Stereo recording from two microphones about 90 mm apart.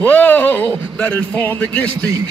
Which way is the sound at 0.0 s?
15° left (ahead or behind).